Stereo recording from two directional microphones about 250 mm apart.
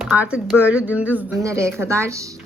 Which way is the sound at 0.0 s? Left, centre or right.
Centre.